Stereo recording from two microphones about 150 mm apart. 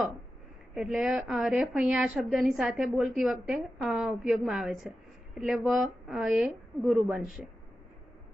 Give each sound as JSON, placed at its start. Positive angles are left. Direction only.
{"t": 0.7, "sound": "a woman's voice", "side_deg": 0}